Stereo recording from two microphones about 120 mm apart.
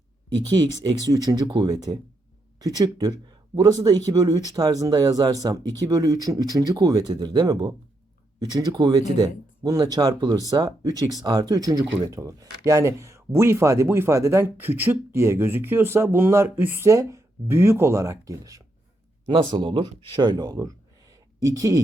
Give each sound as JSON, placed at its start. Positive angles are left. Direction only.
{"t": 0.9, "sound": "speech", "side_deg": -30}
{"t": 19.3, "sound": "speech", "side_deg": -50}